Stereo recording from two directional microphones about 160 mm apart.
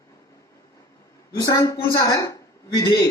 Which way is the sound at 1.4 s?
20° left (ahead or behind).